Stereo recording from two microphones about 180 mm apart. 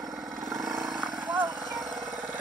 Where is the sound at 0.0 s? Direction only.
Centre (ahead or behind).